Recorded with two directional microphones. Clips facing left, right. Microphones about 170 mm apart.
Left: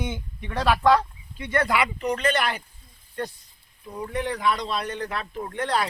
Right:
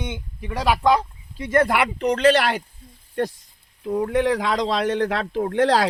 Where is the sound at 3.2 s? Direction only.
90° right.